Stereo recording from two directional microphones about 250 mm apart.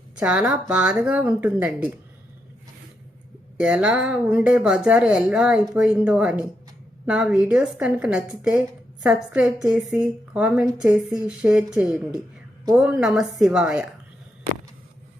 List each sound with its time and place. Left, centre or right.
0.2 s speech: centre
3.6 s speech: centre